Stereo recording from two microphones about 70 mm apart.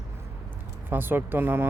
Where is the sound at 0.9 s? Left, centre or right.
Right.